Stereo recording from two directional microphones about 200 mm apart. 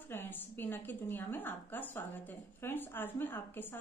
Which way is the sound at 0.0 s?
10° left (ahead or behind).